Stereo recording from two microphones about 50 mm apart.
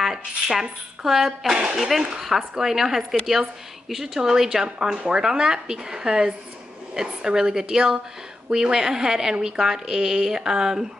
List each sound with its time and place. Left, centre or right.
0.0 s a woman's voice: centre